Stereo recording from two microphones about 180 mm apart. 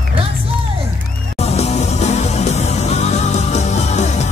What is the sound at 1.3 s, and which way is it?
Music, 35° left (ahead or behind).